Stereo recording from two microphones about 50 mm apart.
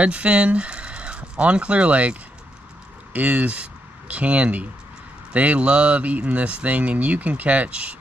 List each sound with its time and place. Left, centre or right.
0.0 s speech: right